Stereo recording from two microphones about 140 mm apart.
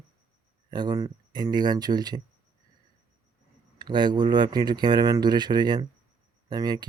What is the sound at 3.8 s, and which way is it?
Speech, 30° right (ahead or behind).